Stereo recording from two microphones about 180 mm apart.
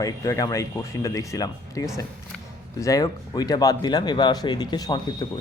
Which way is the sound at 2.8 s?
20° left (ahead or behind).